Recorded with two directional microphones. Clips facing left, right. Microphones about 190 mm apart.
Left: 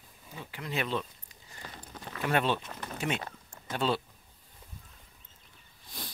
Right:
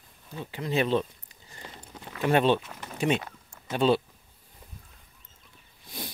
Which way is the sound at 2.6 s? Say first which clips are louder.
Even; 5° right (ahead or behind).